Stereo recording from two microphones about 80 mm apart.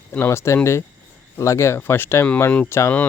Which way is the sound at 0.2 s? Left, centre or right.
Left.